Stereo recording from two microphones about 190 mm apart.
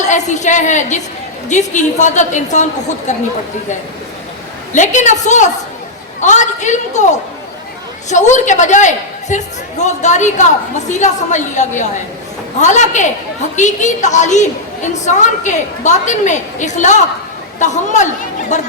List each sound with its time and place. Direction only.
0.0 s a woman's voice: 40° left (ahead or behind)
4.7 s a woman's voice: 40° left (ahead or behind)